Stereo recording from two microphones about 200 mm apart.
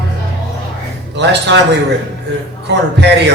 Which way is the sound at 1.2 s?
60° right (ahead or behind).